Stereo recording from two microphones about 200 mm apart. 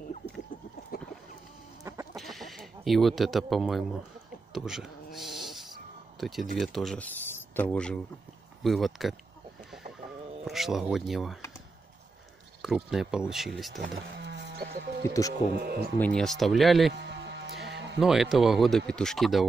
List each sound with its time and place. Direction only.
2.1 s a sound: centre (ahead or behind)
4.5 s cat: centre (ahead or behind)
6.1 s speech: centre (ahead or behind)
10.4 s speech: centre (ahead or behind)
12.6 s speech: centre (ahead or behind)
14.1 s sheep: 60° right (ahead or behind)
15.6 s speech: 50° right (ahead or behind)
16.0 s speech: 5° left (ahead or behind)
16.9 s music: 60° right (ahead or behind)
17.9 s speech: centre (ahead or behind)